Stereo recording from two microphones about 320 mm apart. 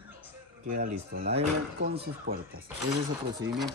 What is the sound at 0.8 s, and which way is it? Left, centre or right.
Speech, right.